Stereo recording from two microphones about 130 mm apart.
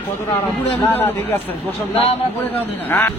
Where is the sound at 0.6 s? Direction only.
15° left (ahead or behind).